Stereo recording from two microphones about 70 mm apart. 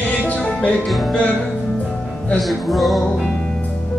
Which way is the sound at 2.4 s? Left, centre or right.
Centre.